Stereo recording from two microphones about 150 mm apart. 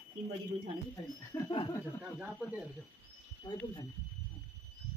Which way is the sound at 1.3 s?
15° left (ahead or behind).